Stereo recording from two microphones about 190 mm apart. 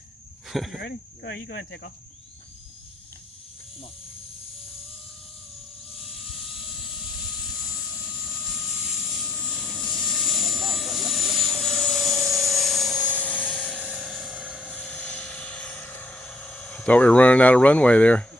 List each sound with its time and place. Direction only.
0.4 s speech: centre (ahead or behind)
0.8 s speech: 65° left (ahead or behind)
6.0 s vehicle: centre (ahead or behind)
13.2 s helicopter: 5° left (ahead or behind)
13.7 s vehicle: 5° right (ahead or behind)